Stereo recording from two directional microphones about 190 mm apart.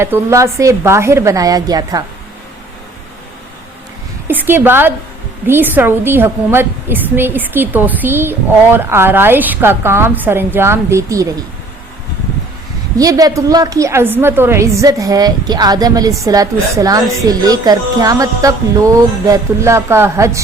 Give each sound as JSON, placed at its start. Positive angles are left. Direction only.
{"t": 0.0, "sound": "a woman's voice", "side_deg": -15}
{"t": 4.3, "sound": "a woman's voice", "side_deg": -10}
{"t": 13.0, "sound": "a woman's voice", "side_deg": -20}